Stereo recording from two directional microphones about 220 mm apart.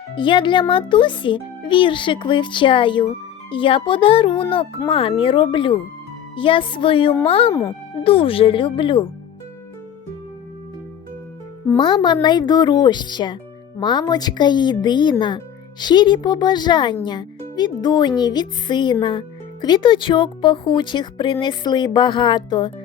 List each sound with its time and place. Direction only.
0.2 s speech: 20° left (ahead or behind)
11.8 s speech: 20° left (ahead or behind)